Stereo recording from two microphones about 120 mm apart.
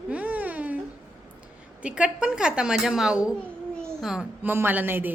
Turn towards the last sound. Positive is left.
turn(degrees=-15)  # may be behind; listen again after turning